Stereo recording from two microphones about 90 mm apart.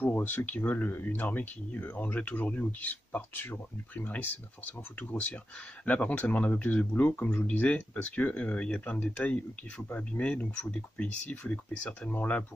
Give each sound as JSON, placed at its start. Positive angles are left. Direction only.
{"t": 0.0, "sound": "speech", "side_deg": 20}